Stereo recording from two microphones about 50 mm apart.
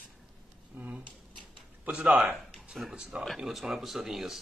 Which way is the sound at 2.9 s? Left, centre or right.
Centre.